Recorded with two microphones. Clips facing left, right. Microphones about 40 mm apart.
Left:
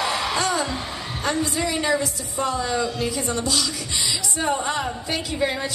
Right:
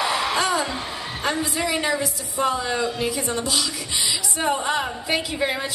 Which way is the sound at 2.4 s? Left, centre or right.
Centre.